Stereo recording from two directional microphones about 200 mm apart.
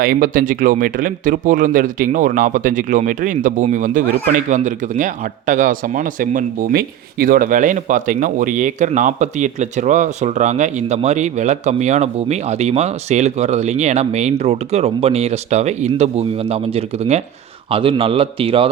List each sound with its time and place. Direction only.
0.0 s a man's voice: 45° right (ahead or behind); by 18.7 s 25° right (ahead or behind)